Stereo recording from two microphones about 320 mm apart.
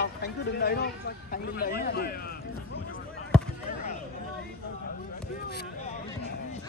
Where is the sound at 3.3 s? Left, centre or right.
Centre.